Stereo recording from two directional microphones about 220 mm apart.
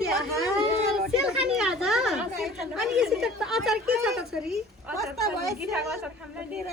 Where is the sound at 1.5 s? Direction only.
Centre (ahead or behind).